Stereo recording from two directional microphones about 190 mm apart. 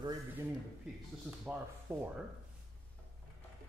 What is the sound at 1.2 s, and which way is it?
Speech, 10° right (ahead or behind).